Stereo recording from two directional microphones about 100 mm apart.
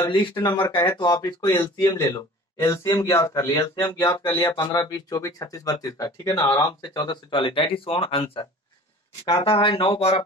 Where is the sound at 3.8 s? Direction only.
45° left (ahead or behind).